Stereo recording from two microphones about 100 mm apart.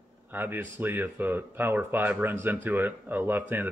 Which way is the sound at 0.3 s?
20° right (ahead or behind).